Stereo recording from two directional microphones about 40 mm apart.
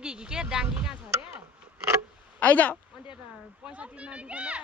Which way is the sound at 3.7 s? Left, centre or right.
Right.